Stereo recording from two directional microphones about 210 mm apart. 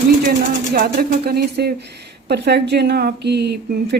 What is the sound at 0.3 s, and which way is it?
Speech, 45° right (ahead or behind).